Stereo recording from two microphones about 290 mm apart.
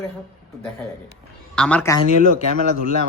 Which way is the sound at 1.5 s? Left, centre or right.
Centre.